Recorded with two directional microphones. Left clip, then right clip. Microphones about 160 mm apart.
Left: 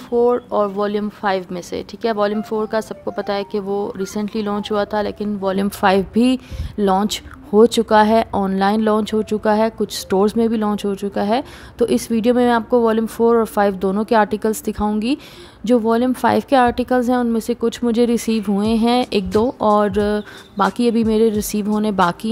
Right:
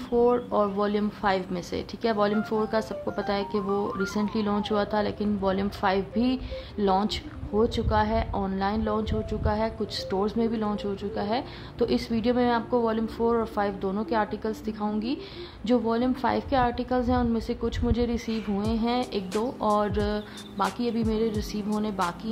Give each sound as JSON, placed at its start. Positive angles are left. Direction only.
{"t": 0.1, "sound": "a woman's voice", "side_deg": 50}